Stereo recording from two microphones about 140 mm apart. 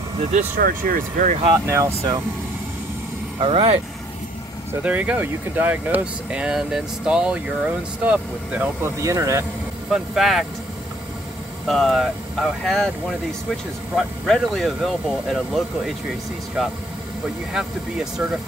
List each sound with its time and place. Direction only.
0.2 s speech: 55° right (ahead or behind)
0.6 s speech: 90° right; by 1.4 s 70° right (ahead or behind)
1.5 s speech: 25° right (ahead or behind)
3.3 s speech: 40° right (ahead or behind)
4.8 s speech: 10° right (ahead or behind)
9.8 s speech: centre (ahead or behind)
11.6 s speech: centre (ahead or behind)
13.9 s speech: 5° left (ahead or behind)
17.5 s speech: 5° right (ahead or behind)